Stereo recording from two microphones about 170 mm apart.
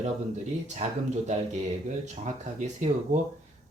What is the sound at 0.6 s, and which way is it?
Speech, 45° right (ahead or behind).